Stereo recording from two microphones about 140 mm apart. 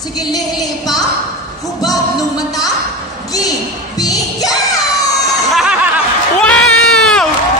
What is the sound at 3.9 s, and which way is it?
Music, 25° left (ahead or behind).